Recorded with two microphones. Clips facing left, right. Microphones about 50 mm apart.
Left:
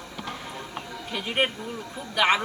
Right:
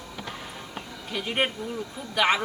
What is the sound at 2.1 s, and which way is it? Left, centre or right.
Speech, centre.